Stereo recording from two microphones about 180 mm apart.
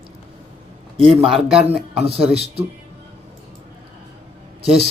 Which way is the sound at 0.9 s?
30° right (ahead or behind).